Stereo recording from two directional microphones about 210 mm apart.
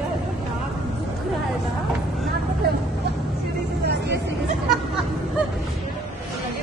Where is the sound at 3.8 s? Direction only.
50° right (ahead or behind).